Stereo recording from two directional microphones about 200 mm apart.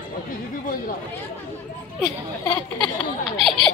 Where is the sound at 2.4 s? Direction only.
10° left (ahead or behind).